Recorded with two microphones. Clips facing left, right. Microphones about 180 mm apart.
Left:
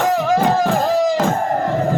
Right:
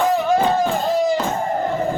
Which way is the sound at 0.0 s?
90° left.